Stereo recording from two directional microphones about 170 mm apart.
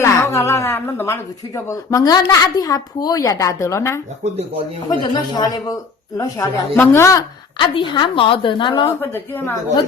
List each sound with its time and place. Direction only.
0.0 s a woman's voice: 15° left (ahead or behind)
4.2 s speech: 40° right (ahead or behind)
4.9 s a woman's voice: 25° left (ahead or behind)
7.7 s a woman's voice: 30° left (ahead or behind)
9.0 s a woman's voice: 10° left (ahead or behind)